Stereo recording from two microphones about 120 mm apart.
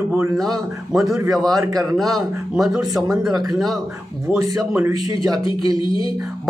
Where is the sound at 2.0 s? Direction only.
Centre (ahead or behind).